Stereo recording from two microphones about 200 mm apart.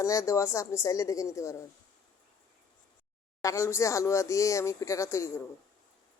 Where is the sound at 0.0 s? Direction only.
15° left (ahead or behind).